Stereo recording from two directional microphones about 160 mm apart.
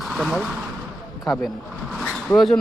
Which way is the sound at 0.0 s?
Centre (ahead or behind).